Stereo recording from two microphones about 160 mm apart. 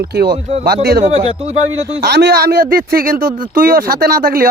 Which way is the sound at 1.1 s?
40° right (ahead or behind).